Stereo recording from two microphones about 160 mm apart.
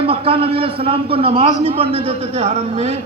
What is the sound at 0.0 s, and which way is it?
A man's voice, 35° right (ahead or behind).